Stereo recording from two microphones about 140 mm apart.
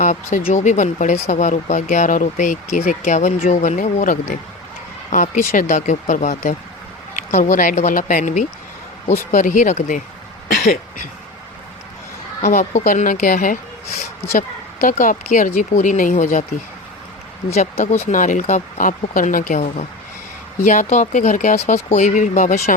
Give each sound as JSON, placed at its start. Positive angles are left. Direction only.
{"t": 0.0, "sound": "speech", "side_deg": 65}
{"t": 7.1, "sound": "speech", "side_deg": 80}
{"t": 10.5, "sound": "cough", "side_deg": 80}
{"t": 12.4, "sound": "speech", "side_deg": 65}
{"t": 18.0, "sound": "speech", "side_deg": 65}